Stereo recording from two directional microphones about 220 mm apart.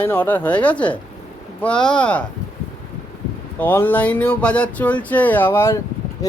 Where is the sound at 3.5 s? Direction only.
10° left (ahead or behind).